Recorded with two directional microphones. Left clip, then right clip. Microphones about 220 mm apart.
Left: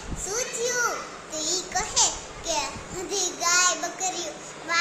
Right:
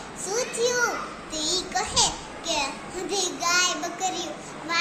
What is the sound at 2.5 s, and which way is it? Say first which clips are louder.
Child singing: right 1 dB; 15° left (ahead or behind).